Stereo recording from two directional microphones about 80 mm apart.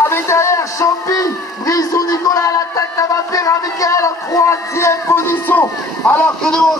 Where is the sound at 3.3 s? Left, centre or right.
Left.